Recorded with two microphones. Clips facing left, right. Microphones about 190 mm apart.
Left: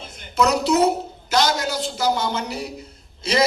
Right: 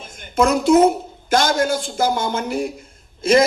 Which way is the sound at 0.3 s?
50° right (ahead or behind).